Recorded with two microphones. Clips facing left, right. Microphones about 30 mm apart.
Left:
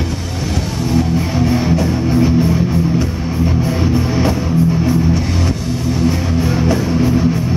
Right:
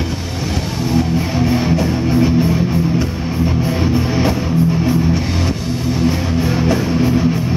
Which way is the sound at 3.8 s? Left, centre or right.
Centre.